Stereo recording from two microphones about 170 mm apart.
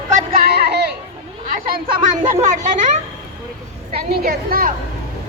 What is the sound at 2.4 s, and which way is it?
Speech, 45° right (ahead or behind).